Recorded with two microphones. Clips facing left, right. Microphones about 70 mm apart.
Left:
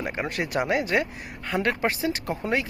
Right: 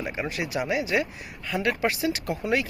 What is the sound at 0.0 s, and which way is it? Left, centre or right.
Speech, left.